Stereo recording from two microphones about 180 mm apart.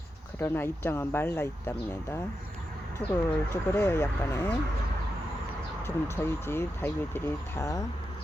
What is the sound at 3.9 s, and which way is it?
Speech, 10° left (ahead or behind).